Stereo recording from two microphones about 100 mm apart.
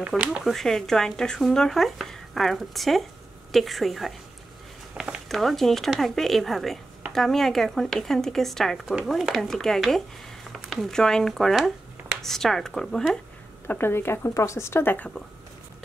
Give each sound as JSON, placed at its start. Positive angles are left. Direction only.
{"t": 0.2, "sound": "speech", "side_deg": -10}
{"t": 0.5, "sound": "speech", "side_deg": 5}
{"t": 13.7, "sound": "speech", "side_deg": 20}